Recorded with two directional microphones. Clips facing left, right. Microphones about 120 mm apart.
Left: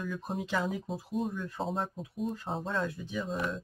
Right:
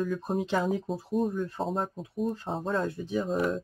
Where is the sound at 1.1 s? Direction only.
45° right (ahead or behind).